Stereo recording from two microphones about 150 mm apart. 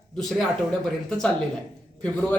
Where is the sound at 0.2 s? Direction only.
Centre (ahead or behind).